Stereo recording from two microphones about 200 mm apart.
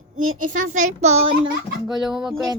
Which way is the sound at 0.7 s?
35° right (ahead or behind).